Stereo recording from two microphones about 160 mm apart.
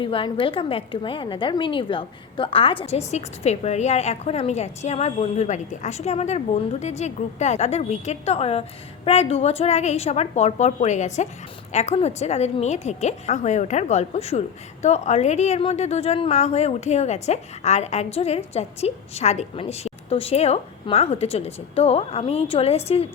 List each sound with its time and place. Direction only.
0.0 s a woman's voice: 35° left (ahead or behind)